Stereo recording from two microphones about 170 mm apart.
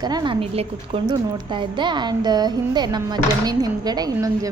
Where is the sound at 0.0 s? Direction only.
25° right (ahead or behind).